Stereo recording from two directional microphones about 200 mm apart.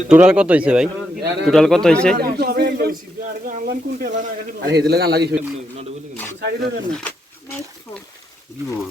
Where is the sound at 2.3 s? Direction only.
50° right (ahead or behind).